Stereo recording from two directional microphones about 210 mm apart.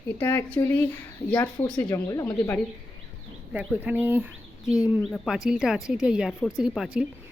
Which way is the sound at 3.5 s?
5° right (ahead or behind).